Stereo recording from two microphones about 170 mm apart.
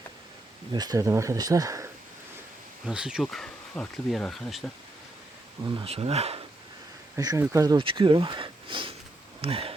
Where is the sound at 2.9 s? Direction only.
5° right (ahead or behind).